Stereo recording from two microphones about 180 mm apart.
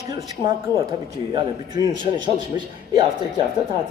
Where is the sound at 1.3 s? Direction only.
25° right (ahead or behind).